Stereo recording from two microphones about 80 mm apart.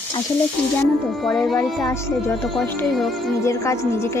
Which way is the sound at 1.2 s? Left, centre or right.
Centre.